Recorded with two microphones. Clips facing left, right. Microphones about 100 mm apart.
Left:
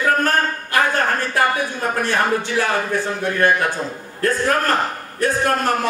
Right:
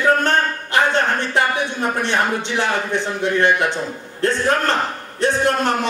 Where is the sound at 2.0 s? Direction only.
25° right (ahead or behind).